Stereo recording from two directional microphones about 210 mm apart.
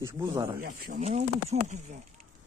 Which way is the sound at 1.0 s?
30° right (ahead or behind).